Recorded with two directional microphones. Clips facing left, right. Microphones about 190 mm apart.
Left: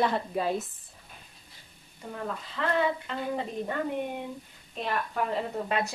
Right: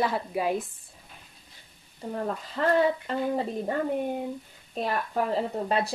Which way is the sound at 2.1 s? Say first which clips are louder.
Right 5 dB; 40° right (ahead or behind).